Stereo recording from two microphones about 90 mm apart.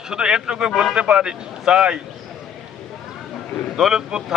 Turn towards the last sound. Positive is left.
turn(degrees=-5)  # may be behind; listen again after turning